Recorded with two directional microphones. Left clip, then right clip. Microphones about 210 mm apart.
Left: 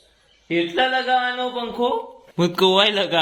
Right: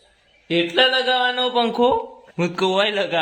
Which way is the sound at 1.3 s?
45° right (ahead or behind).